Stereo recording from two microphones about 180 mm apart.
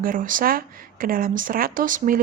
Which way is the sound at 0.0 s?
50° right (ahead or behind).